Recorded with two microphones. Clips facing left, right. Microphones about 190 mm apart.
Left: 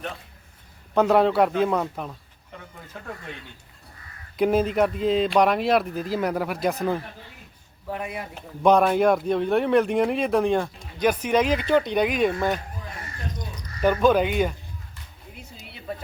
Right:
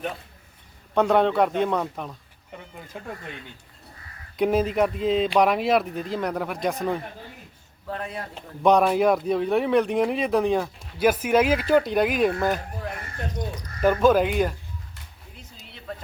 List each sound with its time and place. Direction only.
0.9 s speech: centre (ahead or behind)
2.9 s speech: 15° right (ahead or behind)
4.4 s speech: centre (ahead or behind)
7.9 s speech: 15° left (ahead or behind)
8.6 s speech: centre (ahead or behind)
13.8 s speech: centre (ahead or behind)
15.4 s a sound: 10° left (ahead or behind)